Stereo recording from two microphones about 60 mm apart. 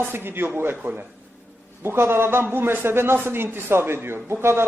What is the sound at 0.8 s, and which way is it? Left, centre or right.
Speech, right.